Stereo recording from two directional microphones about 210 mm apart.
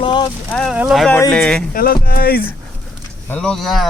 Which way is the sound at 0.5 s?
Centre (ahead or behind).